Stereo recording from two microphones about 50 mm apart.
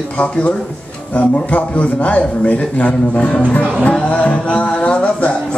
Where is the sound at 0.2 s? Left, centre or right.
Left.